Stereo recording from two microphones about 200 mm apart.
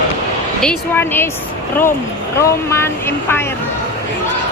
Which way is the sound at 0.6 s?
5° left (ahead or behind).